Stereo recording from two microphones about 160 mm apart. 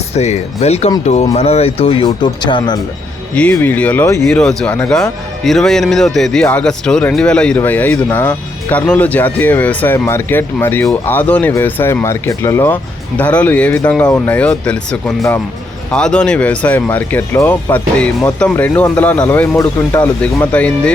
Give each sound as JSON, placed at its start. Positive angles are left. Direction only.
{"t": 0.1, "sound": "speech", "side_deg": 45}
{"t": 3.3, "sound": "speech", "side_deg": 5}
{"t": 4.4, "sound": "speech", "side_deg": 5}